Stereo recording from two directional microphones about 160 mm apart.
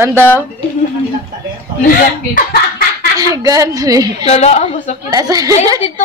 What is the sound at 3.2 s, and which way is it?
Speech, 20° right (ahead or behind).